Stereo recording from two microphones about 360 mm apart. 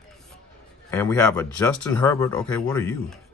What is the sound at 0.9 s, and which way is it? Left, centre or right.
Speech, centre.